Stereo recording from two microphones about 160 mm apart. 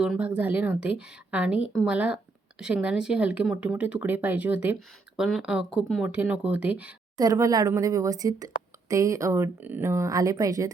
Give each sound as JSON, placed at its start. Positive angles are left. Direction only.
{"t": 0.0, "sound": "speech", "side_deg": -5}
{"t": 7.2, "sound": "speech", "side_deg": -20}